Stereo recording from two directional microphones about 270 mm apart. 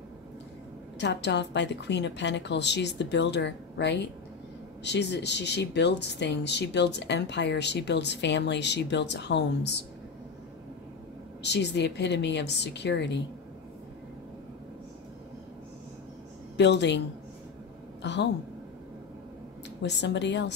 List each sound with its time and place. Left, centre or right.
0.9 s speech: left
11.4 s speech: left
16.5 s speech: left
18.0 s speech: left
19.8 s speech: left